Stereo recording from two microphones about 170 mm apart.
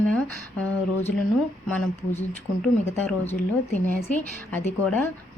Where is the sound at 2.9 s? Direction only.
10° left (ahead or behind).